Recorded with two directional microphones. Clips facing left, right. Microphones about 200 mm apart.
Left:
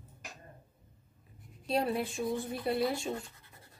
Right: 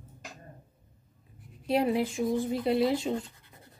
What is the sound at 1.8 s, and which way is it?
Speech, 15° right (ahead or behind).